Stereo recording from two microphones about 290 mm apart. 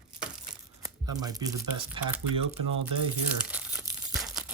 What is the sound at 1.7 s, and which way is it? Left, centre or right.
Speech, right.